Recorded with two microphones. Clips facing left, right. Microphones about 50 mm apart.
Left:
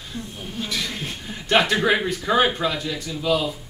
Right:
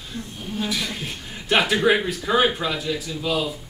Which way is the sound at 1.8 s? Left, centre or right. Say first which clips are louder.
Right 1 dB; centre.